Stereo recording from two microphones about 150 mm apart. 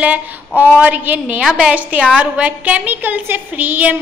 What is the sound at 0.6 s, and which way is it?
A woman's voice, 10° right (ahead or behind).